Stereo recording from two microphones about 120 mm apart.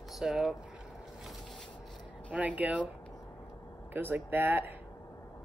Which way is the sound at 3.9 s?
15° right (ahead or behind).